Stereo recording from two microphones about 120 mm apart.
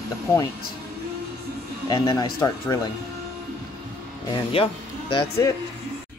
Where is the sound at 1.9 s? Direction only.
35° left (ahead or behind).